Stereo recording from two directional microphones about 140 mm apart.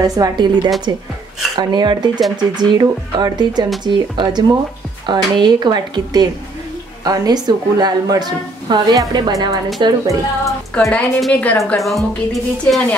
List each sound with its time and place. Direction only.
0.0 s a woman's voice: 25° right (ahead or behind)
10.7 s a woman's voice: 5° left (ahead or behind)